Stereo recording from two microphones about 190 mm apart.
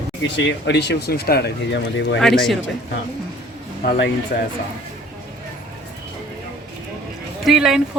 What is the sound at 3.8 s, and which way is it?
Speech, 70° left (ahead or behind).